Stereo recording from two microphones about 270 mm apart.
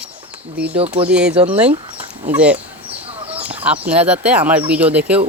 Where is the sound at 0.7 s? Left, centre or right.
Right.